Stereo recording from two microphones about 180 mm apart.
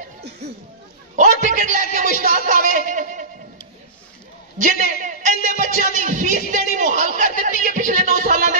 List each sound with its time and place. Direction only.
1.1 s a man's voice: 45° right (ahead or behind)
4.6 s a man's voice: 45° right (ahead or behind)